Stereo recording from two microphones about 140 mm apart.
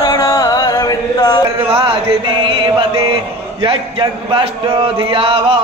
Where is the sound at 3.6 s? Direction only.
40° right (ahead or behind).